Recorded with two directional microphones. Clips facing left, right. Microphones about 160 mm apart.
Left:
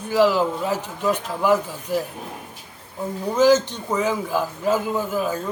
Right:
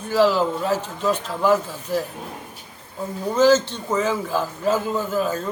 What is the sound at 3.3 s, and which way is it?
Speech, 15° left (ahead or behind).